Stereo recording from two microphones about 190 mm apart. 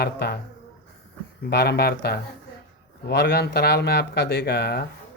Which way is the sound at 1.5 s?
55° left (ahead or behind).